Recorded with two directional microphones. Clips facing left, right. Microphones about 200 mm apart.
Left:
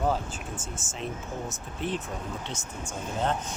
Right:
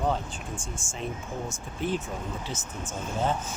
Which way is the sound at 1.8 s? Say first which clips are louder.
Right 2 dB; centre (ahead or behind).